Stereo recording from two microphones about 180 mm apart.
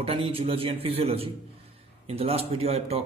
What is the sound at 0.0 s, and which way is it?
A man's voice, 30° right (ahead or behind).